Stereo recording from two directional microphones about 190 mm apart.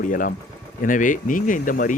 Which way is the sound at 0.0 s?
45° left (ahead or behind).